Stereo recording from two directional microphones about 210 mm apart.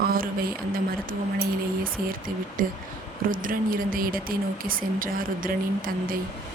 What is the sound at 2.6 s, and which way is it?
Speech, 40° right (ahead or behind).